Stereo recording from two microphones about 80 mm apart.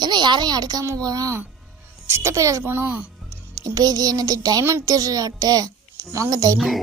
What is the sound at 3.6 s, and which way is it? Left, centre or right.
A woman's voice, right.